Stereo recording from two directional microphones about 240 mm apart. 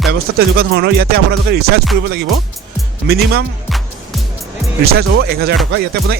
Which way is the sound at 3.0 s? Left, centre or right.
Right.